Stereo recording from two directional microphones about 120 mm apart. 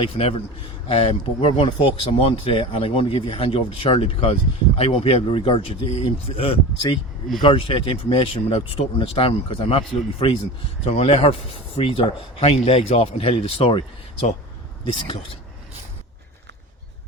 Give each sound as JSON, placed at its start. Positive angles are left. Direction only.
{"t": 0.0, "sound": "speech", "side_deg": 50}
{"t": 14.9, "sound": "speech", "side_deg": 45}